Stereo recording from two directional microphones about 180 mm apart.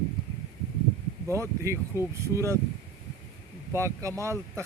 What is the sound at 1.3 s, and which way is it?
Speech, 15° right (ahead or behind).